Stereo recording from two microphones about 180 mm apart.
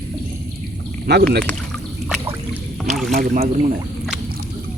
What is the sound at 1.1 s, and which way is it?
Speech, 65° right (ahead or behind).